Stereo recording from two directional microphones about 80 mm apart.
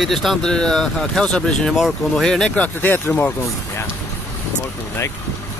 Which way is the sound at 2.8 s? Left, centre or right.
Left.